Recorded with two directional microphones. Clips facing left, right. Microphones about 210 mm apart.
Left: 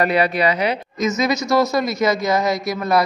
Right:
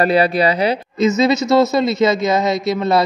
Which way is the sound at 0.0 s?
30° right (ahead or behind).